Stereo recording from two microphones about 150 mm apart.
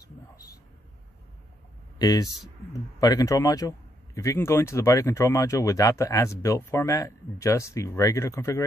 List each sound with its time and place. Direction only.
0.0 s vehicle: 25° left (ahead or behind)
2.0 s a man's voice: 25° left (ahead or behind)